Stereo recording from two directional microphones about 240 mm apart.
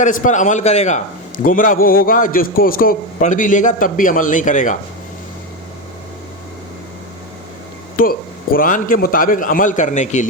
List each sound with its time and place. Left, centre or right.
0.0 s a man's voice: left
8.0 s a man's voice: left